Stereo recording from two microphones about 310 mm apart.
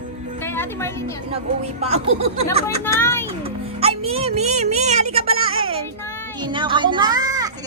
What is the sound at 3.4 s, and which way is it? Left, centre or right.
Music, centre.